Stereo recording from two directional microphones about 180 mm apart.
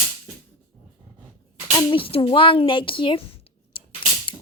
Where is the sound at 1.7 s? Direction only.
30° left (ahead or behind).